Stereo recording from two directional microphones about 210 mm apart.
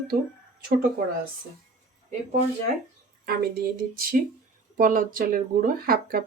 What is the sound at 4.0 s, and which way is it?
Speech, 45° right (ahead or behind).